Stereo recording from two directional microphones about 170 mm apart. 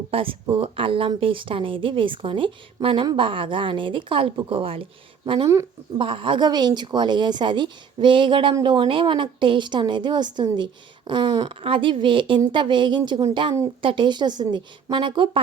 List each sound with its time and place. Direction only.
0.1 s a woman's voice: 30° right (ahead or behind)